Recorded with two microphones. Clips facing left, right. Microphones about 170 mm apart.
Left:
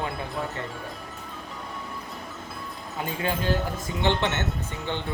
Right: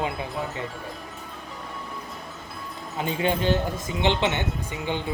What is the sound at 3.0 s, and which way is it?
Speech, 25° right (ahead or behind).